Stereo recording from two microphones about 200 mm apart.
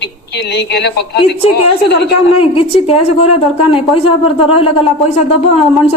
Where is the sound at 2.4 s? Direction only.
25° left (ahead or behind).